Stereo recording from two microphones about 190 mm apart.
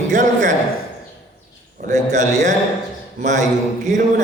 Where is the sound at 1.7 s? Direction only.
40° right (ahead or behind).